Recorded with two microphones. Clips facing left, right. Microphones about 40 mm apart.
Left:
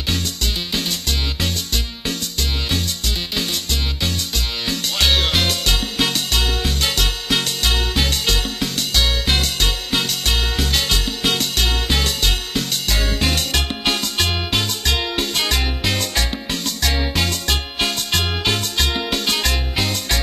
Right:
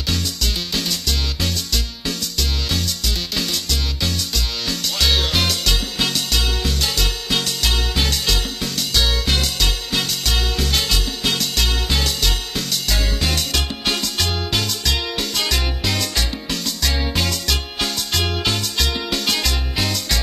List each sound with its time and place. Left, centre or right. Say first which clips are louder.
0.1 s music: even; left